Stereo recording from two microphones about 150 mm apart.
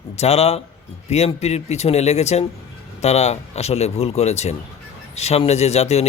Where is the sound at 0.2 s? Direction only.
45° left (ahead or behind).